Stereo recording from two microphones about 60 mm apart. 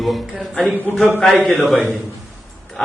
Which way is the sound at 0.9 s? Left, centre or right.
Centre.